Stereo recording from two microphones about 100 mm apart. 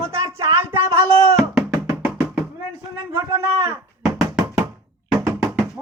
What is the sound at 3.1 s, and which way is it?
Speech, 30° right (ahead or behind).